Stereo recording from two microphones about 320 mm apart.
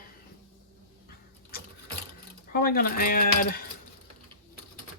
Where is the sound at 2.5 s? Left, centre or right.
Left.